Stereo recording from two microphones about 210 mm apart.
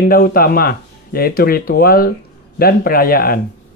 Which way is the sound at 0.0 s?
45° left (ahead or behind).